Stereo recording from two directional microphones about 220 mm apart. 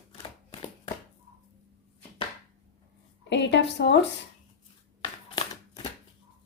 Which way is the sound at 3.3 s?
55° left (ahead or behind).